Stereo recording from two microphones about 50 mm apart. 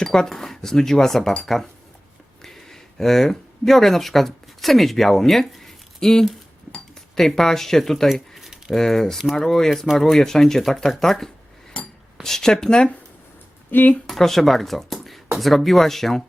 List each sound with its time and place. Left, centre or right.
0.0 s speech: centre
8.4 s a sound: centre
8.7 s speech: centre
11.8 s filing: centre
12.2 s speech: centre
13.7 s speech: left
14.1 s speech: centre